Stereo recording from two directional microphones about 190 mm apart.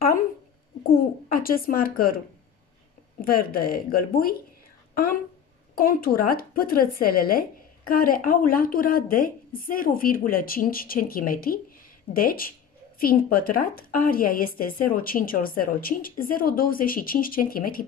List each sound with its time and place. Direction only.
0.8 s a woman's voice: 50° left (ahead or behind)
5.8 s a woman's voice: 50° left (ahead or behind)